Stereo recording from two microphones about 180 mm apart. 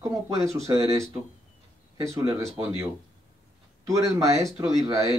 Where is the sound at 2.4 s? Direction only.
15° right (ahead or behind).